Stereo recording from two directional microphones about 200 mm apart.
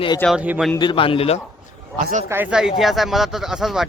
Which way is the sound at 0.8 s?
25° left (ahead or behind).